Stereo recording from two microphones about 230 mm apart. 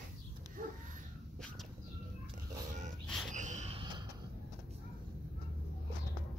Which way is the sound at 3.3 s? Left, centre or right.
Right.